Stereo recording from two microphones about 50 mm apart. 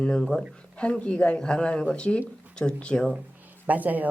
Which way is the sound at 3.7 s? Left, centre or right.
Right.